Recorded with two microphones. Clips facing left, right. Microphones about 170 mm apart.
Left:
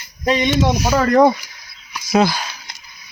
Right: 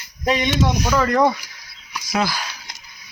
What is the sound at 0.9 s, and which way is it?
Speech, 30° left (ahead or behind).